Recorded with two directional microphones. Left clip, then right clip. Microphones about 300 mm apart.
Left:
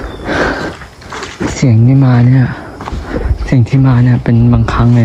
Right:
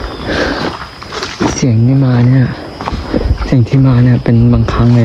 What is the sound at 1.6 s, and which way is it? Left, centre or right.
Speech, centre.